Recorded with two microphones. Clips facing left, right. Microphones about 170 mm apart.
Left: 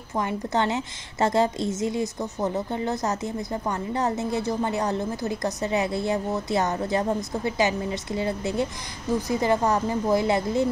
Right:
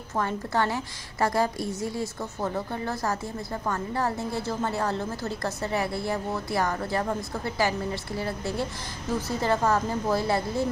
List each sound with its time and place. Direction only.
0.1 s a woman's voice: 15° left (ahead or behind)